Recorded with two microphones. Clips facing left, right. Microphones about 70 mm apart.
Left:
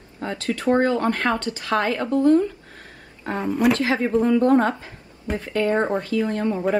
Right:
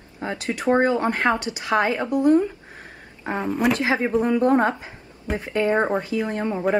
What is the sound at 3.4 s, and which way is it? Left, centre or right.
Speech, centre.